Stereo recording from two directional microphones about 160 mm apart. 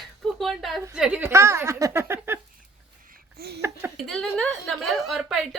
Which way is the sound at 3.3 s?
85° right.